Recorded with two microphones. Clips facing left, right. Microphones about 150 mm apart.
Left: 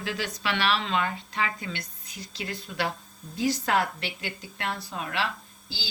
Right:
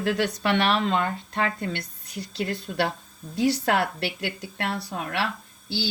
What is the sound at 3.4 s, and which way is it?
A woman's voice, 75° right (ahead or behind).